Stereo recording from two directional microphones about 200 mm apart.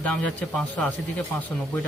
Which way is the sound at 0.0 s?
5° left (ahead or behind).